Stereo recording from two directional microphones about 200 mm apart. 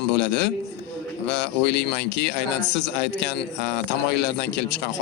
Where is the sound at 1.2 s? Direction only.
60° left (ahead or behind).